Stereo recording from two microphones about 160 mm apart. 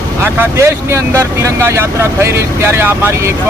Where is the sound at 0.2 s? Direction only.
15° right (ahead or behind).